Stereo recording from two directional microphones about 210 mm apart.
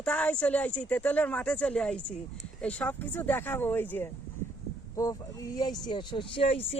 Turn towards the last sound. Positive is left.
turn(degrees=25)  # may be behind; listen again after turning